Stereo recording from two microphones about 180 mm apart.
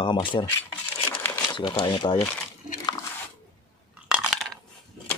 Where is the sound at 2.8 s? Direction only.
20° left (ahead or behind).